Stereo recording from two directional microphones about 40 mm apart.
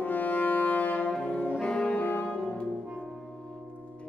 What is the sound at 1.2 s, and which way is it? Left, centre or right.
Brass instrument, left.